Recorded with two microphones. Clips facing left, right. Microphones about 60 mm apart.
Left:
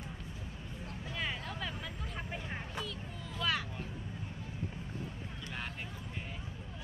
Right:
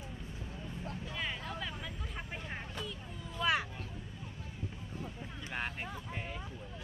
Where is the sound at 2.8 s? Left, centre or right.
Centre.